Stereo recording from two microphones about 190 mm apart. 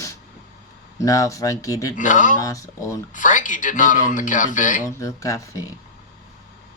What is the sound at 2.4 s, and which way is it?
Speech, 15° left (ahead or behind).